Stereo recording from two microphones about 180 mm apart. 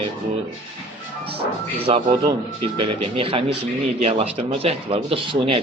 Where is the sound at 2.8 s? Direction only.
30° right (ahead or behind).